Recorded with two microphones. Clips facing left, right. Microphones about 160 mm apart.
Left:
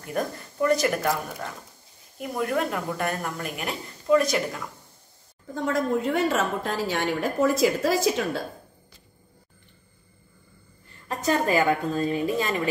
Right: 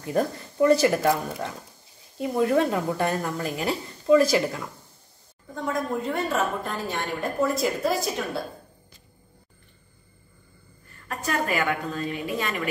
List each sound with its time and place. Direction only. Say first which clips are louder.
0.0 s speech: right 4 dB; 25° right (ahead or behind)
5.5 s a woman's voice: left 3 dB; 90° left
11.1 s a woman's voice: left 4 dB; 35° left (ahead or behind)